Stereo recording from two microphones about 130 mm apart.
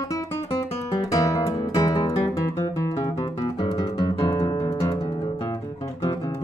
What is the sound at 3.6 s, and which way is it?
Music, 30° left (ahead or behind).